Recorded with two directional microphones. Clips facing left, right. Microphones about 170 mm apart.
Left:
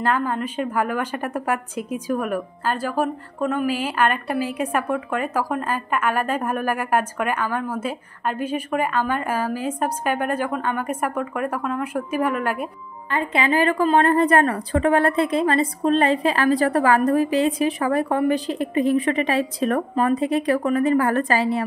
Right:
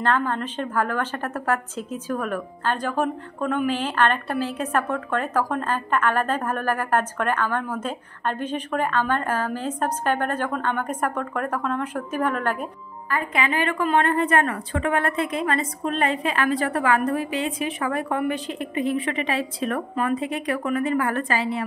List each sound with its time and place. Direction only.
0.0 s a woman's voice: 10° left (ahead or behind)
13.1 s a woman's voice: 30° left (ahead or behind)